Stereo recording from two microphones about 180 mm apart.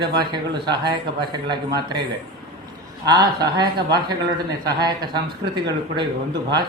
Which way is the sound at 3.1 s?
20° right (ahead or behind).